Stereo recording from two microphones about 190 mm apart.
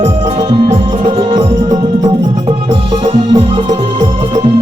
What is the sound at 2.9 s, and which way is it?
Music, 25° right (ahead or behind).